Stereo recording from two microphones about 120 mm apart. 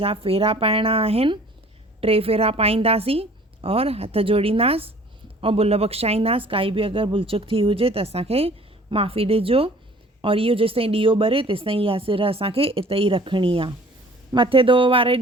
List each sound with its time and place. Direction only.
0.0 s a woman's voice: 55° right (ahead or behind)